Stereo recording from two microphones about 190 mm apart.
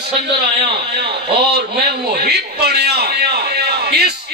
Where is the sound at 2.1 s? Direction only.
55° right (ahead or behind).